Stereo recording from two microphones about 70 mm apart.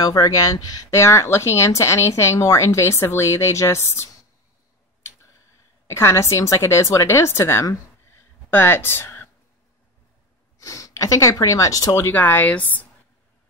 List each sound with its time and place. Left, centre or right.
0.0 s speech: left
0.9 s speech: left
5.9 s a woman's voice: left
10.6 s speech: left
12.1 s speech: left